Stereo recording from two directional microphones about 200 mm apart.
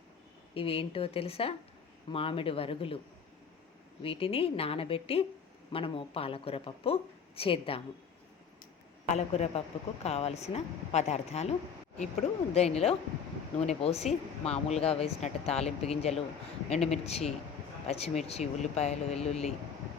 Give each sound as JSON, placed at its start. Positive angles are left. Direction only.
{"t": 0.5, "sound": "speech", "side_deg": 30}
{"t": 4.0, "sound": "speech", "side_deg": 30}
{"t": 9.1, "sound": "speech", "side_deg": 30}
{"t": 12.5, "sound": "speech", "side_deg": 30}